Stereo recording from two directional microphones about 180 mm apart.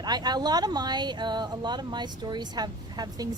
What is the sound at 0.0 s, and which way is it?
A woman's voice, 20° right (ahead or behind).